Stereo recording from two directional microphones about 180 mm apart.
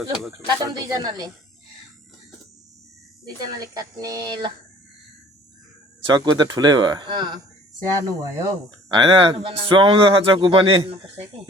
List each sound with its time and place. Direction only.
0.4 s a man's voice: 20° right (ahead or behind)
3.6 s a man's voice: 20° right (ahead or behind)
6.1 s a man's voice: 25° right (ahead or behind)